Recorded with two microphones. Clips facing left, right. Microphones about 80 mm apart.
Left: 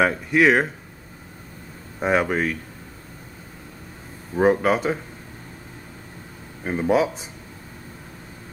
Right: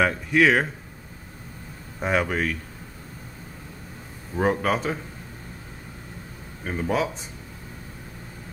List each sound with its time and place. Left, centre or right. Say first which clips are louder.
0.0 s speech: left 2 dB; centre
2.0 s speech: left 3 dB; centre
4.4 s speech: left 5 dB; centre
6.6 s speech: left 6 dB; centre